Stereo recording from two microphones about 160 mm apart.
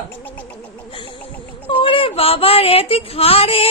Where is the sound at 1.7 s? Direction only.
35° left (ahead or behind).